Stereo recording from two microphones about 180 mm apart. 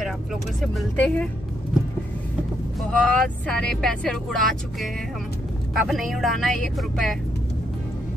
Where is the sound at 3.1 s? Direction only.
5° left (ahead or behind).